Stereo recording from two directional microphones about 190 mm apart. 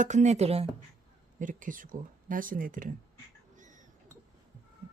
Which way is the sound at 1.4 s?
45° right (ahead or behind).